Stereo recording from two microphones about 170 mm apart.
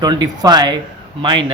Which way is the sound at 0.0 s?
25° right (ahead or behind).